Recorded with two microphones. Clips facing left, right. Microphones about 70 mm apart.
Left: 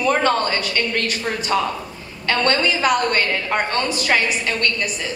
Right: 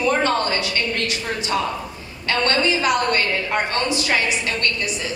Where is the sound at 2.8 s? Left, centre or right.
Left.